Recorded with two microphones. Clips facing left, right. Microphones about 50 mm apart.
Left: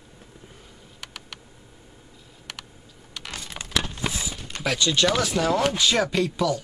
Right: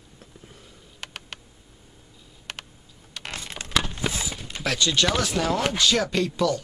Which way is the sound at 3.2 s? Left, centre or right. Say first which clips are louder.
Right 2 dB; right.